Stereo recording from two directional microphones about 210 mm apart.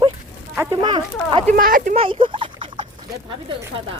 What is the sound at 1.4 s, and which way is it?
Speech, 40° right (ahead or behind).